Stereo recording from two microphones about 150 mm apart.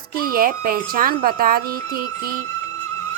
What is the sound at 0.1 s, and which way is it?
Speech, 75° right (ahead or behind).